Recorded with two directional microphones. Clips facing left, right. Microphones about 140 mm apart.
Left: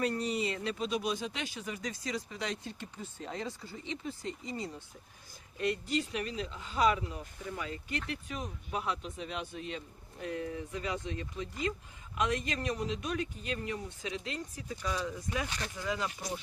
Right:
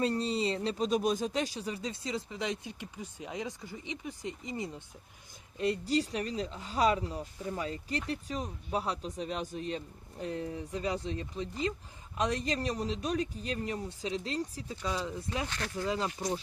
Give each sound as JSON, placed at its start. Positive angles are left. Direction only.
{"t": 0.0, "sound": "speech", "side_deg": -30}
{"t": 5.5, "sound": "speech", "side_deg": -30}
{"t": 15.4, "sound": "speech", "side_deg": 15}
{"t": 15.9, "sound": "speech", "side_deg": -30}